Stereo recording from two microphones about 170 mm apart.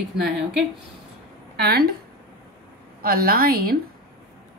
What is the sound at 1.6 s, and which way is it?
Speech, 65° right (ahead or behind).